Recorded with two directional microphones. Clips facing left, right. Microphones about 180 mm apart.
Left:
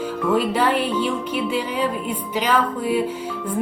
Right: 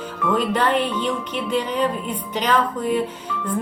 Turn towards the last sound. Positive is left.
turn(degrees=5)  # may be behind; listen again after turning